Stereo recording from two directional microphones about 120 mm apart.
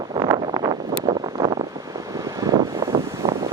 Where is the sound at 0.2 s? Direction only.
35° right (ahead or behind).